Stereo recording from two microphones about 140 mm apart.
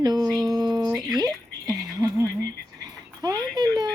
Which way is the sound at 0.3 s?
Centre (ahead or behind).